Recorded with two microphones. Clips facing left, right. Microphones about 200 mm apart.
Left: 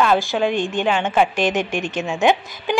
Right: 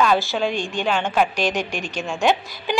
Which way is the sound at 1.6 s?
20° left (ahead or behind).